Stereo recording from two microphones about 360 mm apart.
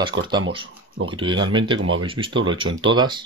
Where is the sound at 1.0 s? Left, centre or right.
Centre.